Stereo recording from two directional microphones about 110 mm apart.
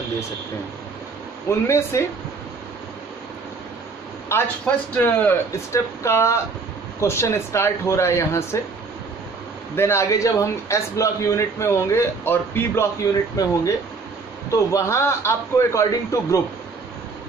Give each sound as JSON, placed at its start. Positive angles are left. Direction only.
{"t": 1.7, "sound": "a man's voice", "side_deg": 25}
{"t": 4.3, "sound": "a man's voice", "side_deg": 25}
{"t": 5.5, "sound": "a man's voice", "side_deg": 25}
{"t": 9.8, "sound": "a man's voice", "side_deg": 25}
{"t": 13.0, "sound": "a man's voice", "side_deg": 30}